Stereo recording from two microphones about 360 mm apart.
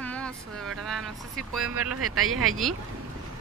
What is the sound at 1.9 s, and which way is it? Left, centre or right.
Speech, right.